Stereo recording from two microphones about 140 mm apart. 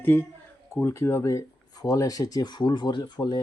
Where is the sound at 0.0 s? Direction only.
15° left (ahead or behind); by 3.4 s 30° left (ahead or behind).